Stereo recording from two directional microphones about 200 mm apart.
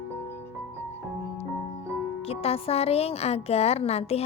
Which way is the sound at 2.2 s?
30° left (ahead or behind).